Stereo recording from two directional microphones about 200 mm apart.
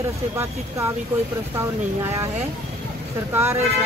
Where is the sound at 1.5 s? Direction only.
15° right (ahead or behind).